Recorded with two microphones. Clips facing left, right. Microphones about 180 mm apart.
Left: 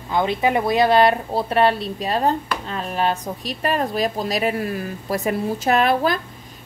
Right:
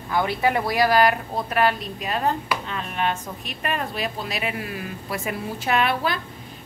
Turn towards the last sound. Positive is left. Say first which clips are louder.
# left 5 dB
turn(degrees=40)  # may be behind; listen again after turning